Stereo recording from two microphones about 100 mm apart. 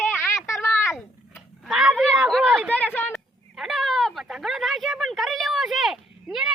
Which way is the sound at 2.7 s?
15° left (ahead or behind).